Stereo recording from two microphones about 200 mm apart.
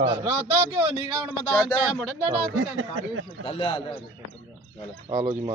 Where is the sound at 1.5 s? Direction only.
5° right (ahead or behind).